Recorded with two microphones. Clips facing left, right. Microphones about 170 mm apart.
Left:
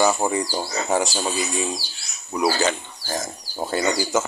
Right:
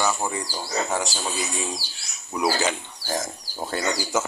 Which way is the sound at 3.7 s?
5° left (ahead or behind).